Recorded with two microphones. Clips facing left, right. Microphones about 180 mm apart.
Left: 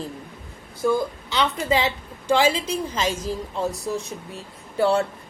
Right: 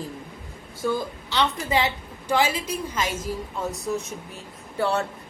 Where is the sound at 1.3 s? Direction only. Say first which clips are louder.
Left 1 dB; 20° left (ahead or behind).